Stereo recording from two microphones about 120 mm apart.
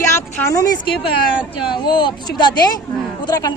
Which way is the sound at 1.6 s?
40° left (ahead or behind).